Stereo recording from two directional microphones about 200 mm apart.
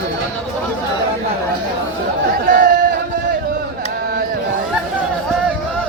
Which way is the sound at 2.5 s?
40° right (ahead or behind).